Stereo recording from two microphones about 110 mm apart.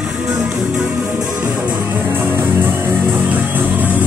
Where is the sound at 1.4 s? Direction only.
20° right (ahead or behind).